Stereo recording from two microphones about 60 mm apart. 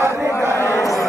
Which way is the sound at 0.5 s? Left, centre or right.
Left.